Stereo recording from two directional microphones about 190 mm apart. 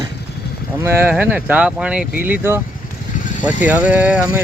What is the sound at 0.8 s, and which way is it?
Speech, 10° right (ahead or behind).